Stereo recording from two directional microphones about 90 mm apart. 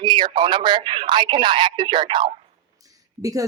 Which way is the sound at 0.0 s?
60° right (ahead or behind).